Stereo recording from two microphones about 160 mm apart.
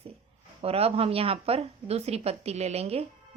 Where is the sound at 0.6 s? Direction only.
40° right (ahead or behind).